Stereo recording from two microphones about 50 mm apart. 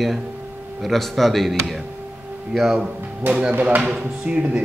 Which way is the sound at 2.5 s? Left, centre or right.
Centre.